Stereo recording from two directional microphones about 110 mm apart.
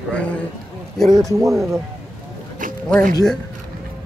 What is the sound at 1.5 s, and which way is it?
Speech, centre (ahead or behind).